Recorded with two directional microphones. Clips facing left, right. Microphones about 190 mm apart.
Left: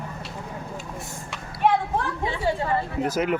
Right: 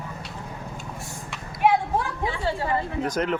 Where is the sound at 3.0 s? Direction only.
5° left (ahead or behind).